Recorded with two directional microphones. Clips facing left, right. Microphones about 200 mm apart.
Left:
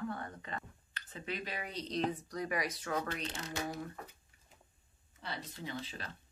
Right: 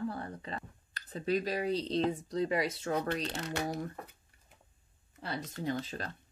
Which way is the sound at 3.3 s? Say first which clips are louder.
Right 5 dB; 65° right (ahead or behind).